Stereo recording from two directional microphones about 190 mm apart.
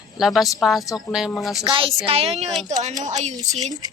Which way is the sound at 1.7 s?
30° right (ahead or behind).